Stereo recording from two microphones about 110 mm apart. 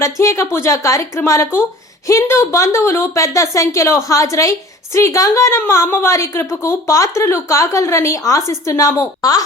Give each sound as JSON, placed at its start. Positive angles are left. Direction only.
{"t": 0.0, "sound": "a woman's voice", "side_deg": 30}